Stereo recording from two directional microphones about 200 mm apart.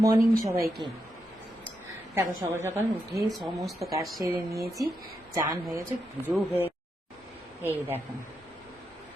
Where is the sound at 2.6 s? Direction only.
15° right (ahead or behind).